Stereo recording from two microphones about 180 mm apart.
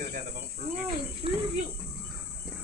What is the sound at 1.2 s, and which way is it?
Speech, 30° right (ahead or behind).